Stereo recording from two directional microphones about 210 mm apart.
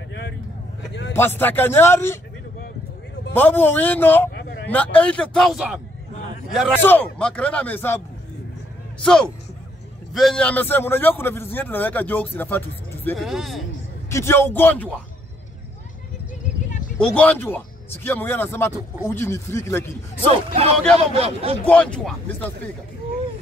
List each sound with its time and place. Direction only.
1.1 s a man's voice: 10° left (ahead or behind)
3.3 s a man's voice: 10° left (ahead or behind)
6.7 s a man's voice: 10° left (ahead or behind)
9.0 s a man's voice: 5° left (ahead or behind)
14.1 s a man's voice: 10° left (ahead or behind)
16.4 s a sound: 35° left (ahead or behind)
17.0 s a man's voice: 5° left (ahead or behind)
20.2 s speech: 30° right (ahead or behind)
21.6 s a man's voice: 5° left (ahead or behind)